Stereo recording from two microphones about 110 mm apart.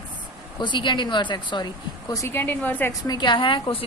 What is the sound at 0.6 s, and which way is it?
A woman's voice, 45° left (ahead or behind).